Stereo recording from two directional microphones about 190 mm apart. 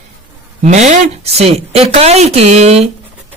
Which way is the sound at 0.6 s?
40° right (ahead or behind).